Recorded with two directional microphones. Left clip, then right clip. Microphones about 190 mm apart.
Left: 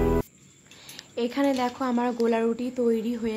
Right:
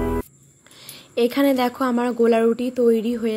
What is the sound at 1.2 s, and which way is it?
Speech, 20° right (ahead or behind).